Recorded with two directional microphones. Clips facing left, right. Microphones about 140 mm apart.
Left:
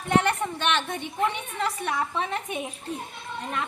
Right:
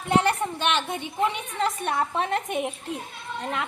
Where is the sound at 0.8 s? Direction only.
5° right (ahead or behind).